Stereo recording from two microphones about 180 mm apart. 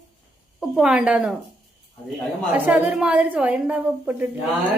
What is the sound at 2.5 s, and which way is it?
A woman's voice, 10° right (ahead or behind).